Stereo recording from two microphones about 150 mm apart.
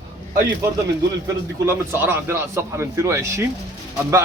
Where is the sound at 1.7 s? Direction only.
15° right (ahead or behind).